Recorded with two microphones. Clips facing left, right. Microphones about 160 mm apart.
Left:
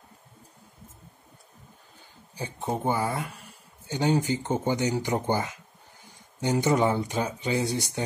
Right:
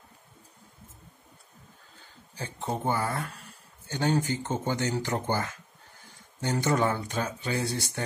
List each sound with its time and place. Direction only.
2.3 s speech: 15° left (ahead or behind)